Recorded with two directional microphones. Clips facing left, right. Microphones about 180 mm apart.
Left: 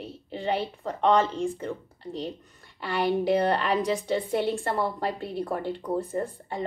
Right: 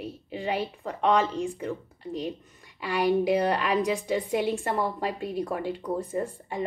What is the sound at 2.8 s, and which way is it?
A woman's voice, 10° right (ahead or behind).